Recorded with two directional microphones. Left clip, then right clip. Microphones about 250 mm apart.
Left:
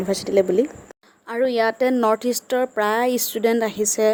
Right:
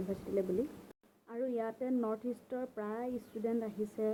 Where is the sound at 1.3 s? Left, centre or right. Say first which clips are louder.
Left 18 dB; left.